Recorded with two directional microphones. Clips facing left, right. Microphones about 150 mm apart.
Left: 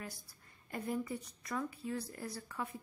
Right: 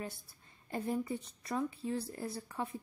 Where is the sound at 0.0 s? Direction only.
25° right (ahead or behind).